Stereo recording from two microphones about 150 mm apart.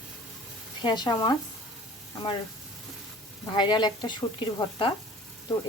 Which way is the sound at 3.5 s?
30° left (ahead or behind).